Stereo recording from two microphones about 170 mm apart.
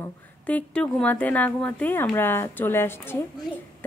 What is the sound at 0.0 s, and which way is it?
A woman's voice, 10° left (ahead or behind).